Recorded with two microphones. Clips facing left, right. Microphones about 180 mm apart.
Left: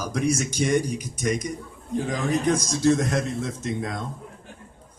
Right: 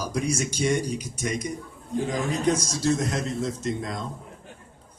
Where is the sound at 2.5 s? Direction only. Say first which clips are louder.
Left 4 dB; 55° left (ahead or behind).